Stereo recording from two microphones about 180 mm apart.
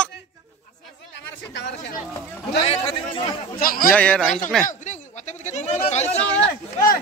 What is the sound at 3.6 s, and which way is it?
Speech, 55° left (ahead or behind).